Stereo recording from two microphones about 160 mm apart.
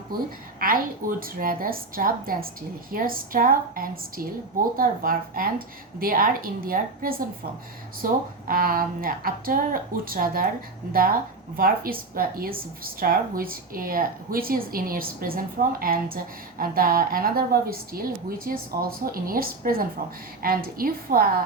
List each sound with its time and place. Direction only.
0.6 s a woman's voice: 65° right (ahead or behind)
11.5 s a woman's voice: 65° right (ahead or behind)